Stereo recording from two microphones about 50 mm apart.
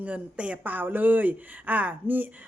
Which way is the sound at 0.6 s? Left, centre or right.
Right.